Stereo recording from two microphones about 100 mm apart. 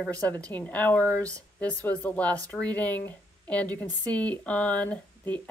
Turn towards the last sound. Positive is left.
turn(degrees=15)  # may be behind; listen again after turning